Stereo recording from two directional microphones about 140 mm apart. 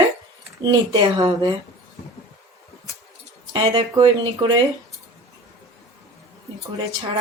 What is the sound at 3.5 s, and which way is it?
Speech, 35° right (ahead or behind).